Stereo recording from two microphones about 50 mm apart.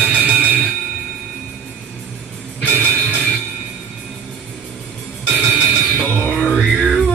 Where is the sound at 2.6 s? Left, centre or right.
Left.